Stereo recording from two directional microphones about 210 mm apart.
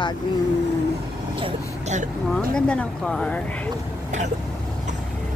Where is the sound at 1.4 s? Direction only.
35° right (ahead or behind).